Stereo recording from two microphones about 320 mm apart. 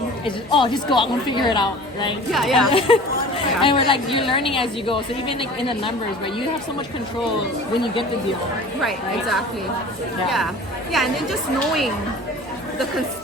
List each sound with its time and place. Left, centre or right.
0.3 s a woman's voice: centre
2.3 s a woman's voice: centre
2.7 s a woman's voice: centre
8.8 s a woman's voice: centre